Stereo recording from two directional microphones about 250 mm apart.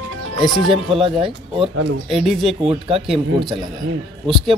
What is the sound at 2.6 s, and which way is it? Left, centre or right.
Speech, right.